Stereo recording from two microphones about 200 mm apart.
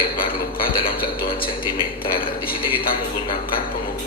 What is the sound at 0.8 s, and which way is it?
Speech, 50° left (ahead or behind).